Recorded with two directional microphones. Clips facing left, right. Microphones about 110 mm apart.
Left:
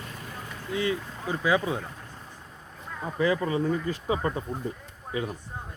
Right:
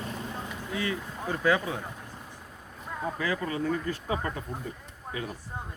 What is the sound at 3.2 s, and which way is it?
Speech, 25° left (ahead or behind).